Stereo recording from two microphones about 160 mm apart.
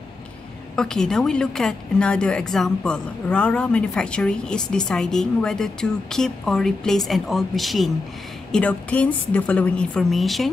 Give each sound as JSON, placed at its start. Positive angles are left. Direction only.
{"t": 0.7, "sound": "a woman's voice", "side_deg": 5}